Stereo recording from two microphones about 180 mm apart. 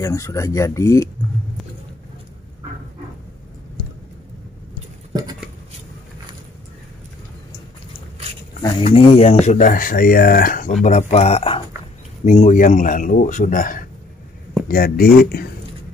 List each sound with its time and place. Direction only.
0.0 s speech: 15° left (ahead or behind)
8.6 s speech: 30° left (ahead or behind)
9.5 s speech: 45° left (ahead or behind)